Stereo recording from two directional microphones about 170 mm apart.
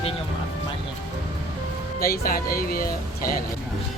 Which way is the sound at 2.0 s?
60° left (ahead or behind).